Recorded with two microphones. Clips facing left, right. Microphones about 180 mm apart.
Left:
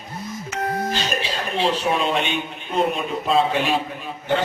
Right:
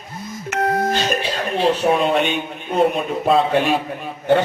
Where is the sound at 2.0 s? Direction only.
50° right (ahead or behind).